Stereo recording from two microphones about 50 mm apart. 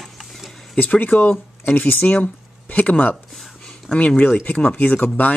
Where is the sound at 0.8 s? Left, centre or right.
Left.